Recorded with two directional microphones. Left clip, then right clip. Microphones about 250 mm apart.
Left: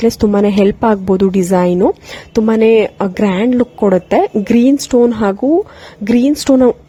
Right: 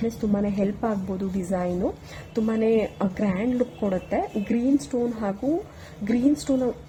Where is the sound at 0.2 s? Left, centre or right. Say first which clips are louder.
Left 15 dB; left.